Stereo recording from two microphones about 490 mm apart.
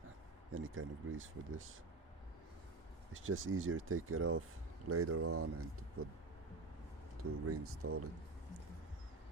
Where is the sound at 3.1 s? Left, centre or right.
Right.